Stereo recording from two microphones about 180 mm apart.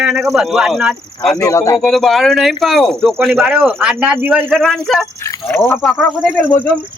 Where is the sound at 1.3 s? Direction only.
15° left (ahead or behind).